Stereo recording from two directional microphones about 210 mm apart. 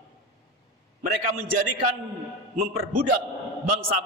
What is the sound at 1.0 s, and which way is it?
A man's voice, 40° right (ahead or behind).